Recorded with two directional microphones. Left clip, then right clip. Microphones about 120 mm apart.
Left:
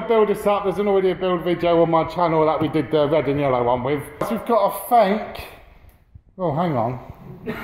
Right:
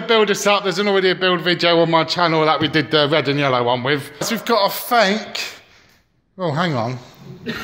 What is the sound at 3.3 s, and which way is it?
A man's voice, 25° right (ahead or behind).